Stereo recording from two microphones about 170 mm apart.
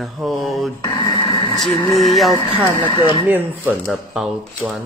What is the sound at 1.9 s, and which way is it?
Speech, centre (ahead or behind).